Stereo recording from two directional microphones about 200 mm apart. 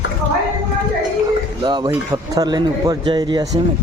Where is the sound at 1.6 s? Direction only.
20° right (ahead or behind).